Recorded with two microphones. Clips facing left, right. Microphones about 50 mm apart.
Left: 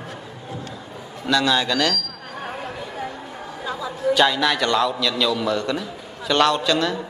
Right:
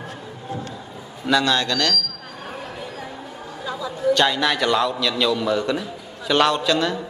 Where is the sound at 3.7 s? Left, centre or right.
Centre.